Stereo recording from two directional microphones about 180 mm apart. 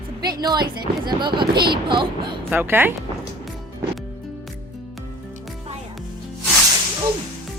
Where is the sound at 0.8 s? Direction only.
25° right (ahead or behind).